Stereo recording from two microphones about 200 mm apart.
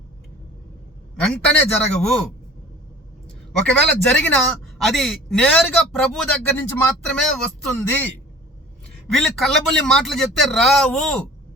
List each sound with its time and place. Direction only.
1.2 s speech: 5° left (ahead or behind)
3.6 s speech: 5° left (ahead or behind)